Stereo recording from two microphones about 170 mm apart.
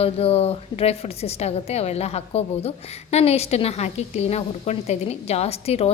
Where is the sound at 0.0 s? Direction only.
35° left (ahead or behind).